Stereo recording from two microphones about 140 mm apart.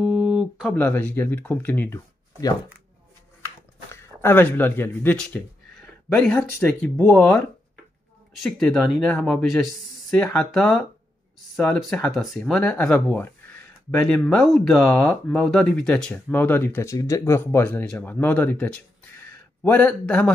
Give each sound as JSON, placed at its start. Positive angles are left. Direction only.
{"t": 0.0, "sound": "a sound", "side_deg": -5}
{"t": 0.7, "sound": "speech", "side_deg": 15}
{"t": 3.9, "sound": "speech", "side_deg": 15}
{"t": 5.2, "sound": "a sound", "side_deg": 5}
{"t": 6.8, "sound": "speech", "side_deg": 5}
{"t": 8.4, "sound": "speech", "side_deg": 5}